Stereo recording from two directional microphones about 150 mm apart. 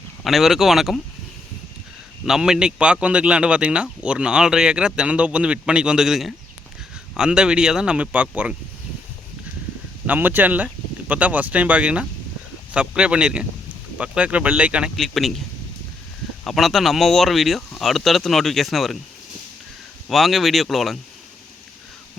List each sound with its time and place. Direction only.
0.3 s speech: centre (ahead or behind)
2.2 s a man's voice: 5° right (ahead or behind)
10.1 s a man's voice: 10° right (ahead or behind)
16.4 s speech: centre (ahead or behind)
20.1 s speech: centre (ahead or behind)